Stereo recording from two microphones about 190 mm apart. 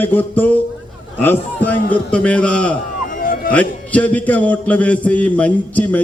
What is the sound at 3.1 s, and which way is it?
Music, 50° left (ahead or behind).